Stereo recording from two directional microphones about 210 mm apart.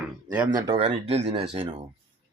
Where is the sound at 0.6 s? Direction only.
25° right (ahead or behind).